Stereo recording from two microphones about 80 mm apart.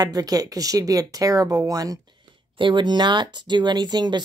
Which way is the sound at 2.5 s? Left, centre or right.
Right.